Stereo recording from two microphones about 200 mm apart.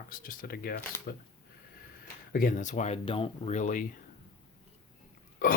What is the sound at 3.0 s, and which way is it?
Speech, 25° left (ahead or behind).